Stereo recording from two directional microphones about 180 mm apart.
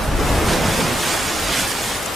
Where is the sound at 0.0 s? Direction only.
Centre (ahead or behind).